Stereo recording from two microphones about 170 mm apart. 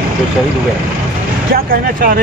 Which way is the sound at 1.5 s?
60° right (ahead or behind).